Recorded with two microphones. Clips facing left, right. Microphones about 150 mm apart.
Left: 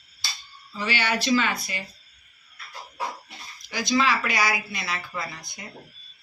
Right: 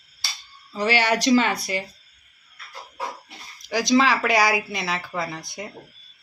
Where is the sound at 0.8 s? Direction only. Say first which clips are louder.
Right 6 dB; 80° right.